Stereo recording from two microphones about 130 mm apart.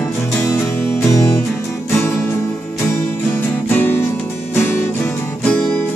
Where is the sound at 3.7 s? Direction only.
15° left (ahead or behind).